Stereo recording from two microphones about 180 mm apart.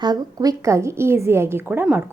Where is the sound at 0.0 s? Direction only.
20° right (ahead or behind).